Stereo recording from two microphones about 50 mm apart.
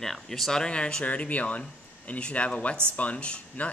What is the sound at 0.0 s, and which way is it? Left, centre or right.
Speech, centre.